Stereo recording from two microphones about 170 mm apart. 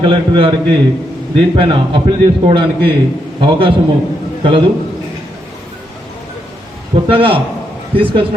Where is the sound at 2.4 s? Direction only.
30° right (ahead or behind).